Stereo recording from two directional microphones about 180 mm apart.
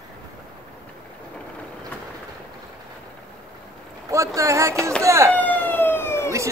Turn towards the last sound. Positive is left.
turn(degrees=15)  # may be behind; listen again after turning